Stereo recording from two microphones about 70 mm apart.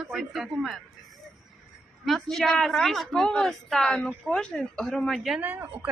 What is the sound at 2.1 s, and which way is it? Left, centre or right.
A woman's voice, centre.